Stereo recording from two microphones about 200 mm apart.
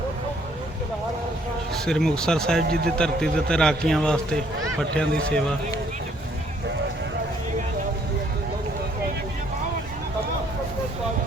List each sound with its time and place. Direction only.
1.8 s a man's voice: 5° left (ahead or behind)
2.6 s speech: 50° right (ahead or behind)
3.0 s a man's voice: 5° left (ahead or behind)